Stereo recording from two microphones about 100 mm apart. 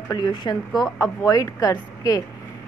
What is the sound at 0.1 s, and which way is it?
Speech, 45° left (ahead or behind).